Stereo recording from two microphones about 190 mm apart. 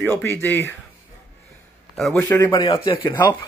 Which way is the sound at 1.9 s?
Centre (ahead or behind).